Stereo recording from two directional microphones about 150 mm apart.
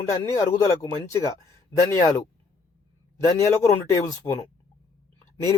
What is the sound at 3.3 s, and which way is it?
Speech, 20° left (ahead or behind).